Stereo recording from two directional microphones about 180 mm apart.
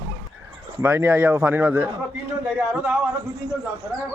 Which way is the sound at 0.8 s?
10° right (ahead or behind).